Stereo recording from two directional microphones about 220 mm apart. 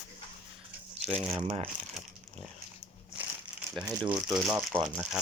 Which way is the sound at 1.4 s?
25° right (ahead or behind).